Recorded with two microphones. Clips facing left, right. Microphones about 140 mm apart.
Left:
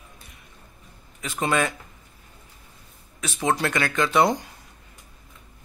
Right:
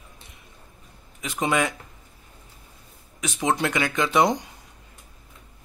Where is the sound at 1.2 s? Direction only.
15° right (ahead or behind).